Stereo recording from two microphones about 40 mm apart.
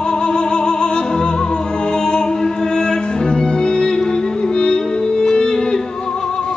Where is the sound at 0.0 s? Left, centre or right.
Centre.